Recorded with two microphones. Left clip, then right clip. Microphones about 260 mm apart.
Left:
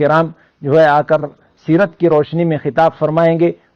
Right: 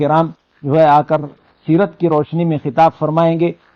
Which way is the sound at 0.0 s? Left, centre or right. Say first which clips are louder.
Left 1 dB; left.